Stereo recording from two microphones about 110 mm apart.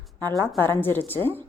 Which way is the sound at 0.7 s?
20° left (ahead or behind).